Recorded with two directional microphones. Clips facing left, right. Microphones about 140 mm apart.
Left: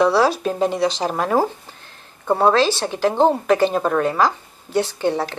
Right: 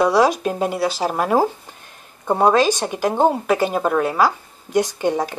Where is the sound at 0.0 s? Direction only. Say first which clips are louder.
Even; 15° right (ahead or behind).